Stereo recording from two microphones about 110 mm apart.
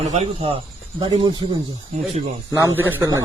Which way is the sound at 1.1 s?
50° right (ahead or behind).